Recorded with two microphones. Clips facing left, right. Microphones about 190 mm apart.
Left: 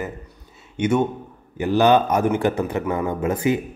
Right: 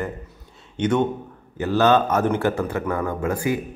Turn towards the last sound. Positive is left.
turn(degrees=20)  # may be behind; listen again after turning